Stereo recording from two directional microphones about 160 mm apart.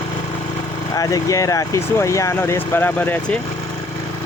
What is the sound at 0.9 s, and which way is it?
Speech, 20° left (ahead or behind).